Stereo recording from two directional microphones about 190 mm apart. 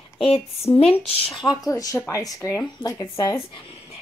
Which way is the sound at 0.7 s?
30° left (ahead or behind).